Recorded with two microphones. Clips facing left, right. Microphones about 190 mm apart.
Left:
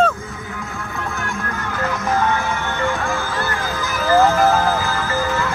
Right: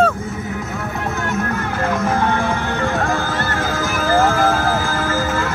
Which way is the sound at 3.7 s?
50° right (ahead or behind).